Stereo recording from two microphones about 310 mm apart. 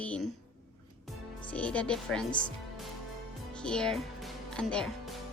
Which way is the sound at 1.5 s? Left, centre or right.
Centre.